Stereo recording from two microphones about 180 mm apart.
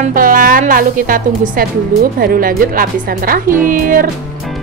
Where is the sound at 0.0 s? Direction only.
50° right (ahead or behind).